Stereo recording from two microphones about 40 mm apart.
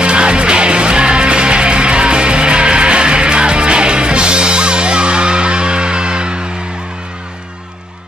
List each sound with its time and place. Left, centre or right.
0.0 s music: right